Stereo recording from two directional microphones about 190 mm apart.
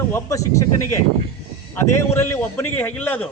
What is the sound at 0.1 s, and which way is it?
A man's voice, 15° left (ahead or behind).